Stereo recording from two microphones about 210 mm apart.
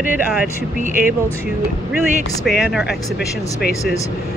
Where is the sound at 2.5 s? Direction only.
Centre (ahead or behind).